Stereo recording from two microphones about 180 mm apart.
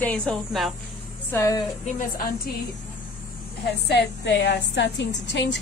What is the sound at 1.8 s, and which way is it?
Speech, 50° left (ahead or behind).